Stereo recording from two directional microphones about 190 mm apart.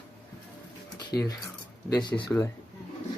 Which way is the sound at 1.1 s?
20° left (ahead or behind).